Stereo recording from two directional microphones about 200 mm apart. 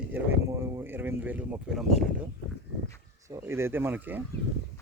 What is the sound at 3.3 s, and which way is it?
Speech, 10° right (ahead or behind).